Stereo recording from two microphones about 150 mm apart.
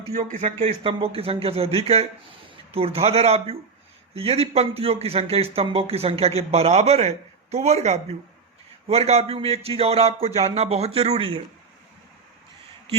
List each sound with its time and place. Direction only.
0.3 s a man's voice: 55° right (ahead or behind)
0.8 s speech: 35° right (ahead or behind)